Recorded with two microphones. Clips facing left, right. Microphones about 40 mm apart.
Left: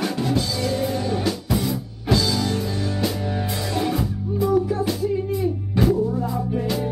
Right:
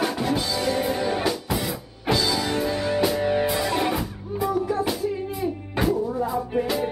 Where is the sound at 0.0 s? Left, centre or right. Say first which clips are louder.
Left 1 dB; centre.